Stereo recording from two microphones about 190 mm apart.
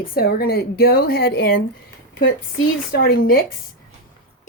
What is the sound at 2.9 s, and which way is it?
Speech, 55° left (ahead or behind).